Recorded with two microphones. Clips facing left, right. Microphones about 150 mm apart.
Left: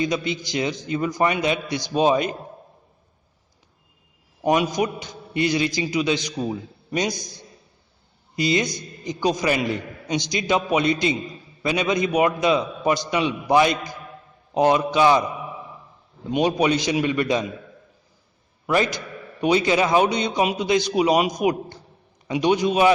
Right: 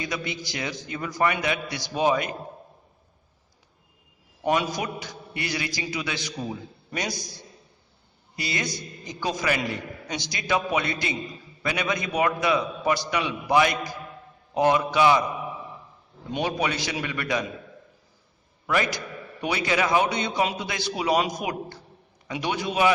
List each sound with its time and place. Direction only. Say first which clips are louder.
0.0 s a man's voice: left 7 dB; 20° left (ahead or behind)
4.4 s a man's voice: left 5 dB; 20° left (ahead or behind)
8.4 s a man's voice: left 9 dB; 20° left (ahead or behind)
16.3 s a man's voice: left 7 dB; 20° left (ahead or behind)
18.6 s a man's voice: left 4 dB; 25° left (ahead or behind)